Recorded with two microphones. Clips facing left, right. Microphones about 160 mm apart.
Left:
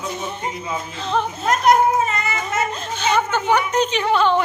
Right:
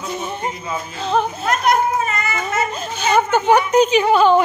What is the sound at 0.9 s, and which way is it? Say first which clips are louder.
Speech: right 4 dB; 10° right (ahead or behind).